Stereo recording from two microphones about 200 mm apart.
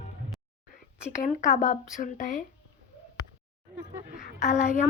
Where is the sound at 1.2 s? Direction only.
40° left (ahead or behind).